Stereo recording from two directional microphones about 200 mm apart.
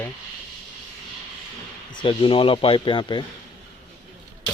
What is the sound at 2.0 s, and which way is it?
Speech, 25° left (ahead or behind).